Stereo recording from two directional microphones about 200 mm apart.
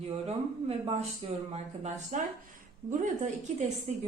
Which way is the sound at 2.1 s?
40° right (ahead or behind).